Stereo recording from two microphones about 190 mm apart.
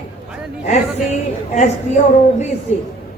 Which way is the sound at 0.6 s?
40° left (ahead or behind).